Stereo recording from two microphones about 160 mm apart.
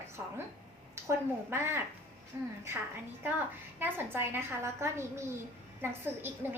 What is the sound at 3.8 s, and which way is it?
A woman's voice, 15° right (ahead or behind).